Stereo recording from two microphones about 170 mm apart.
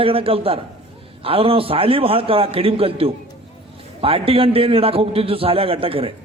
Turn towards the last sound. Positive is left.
turn(degrees=-35)  # may be behind; listen again after turning